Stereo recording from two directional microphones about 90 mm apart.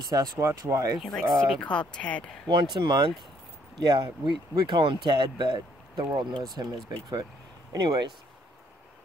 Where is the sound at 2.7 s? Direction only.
60° right (ahead or behind).